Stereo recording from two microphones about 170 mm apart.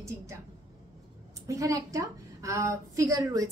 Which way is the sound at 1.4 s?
20° right (ahead or behind).